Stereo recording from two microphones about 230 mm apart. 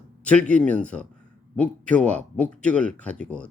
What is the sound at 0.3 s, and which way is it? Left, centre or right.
A man's voice, centre.